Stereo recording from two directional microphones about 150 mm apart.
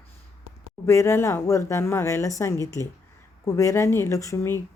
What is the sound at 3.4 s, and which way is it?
Speech, 20° left (ahead or behind).